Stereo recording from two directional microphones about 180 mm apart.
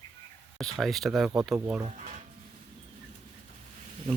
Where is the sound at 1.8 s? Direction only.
40° right (ahead or behind).